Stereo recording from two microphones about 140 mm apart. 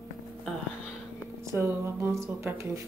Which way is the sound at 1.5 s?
20° right (ahead or behind).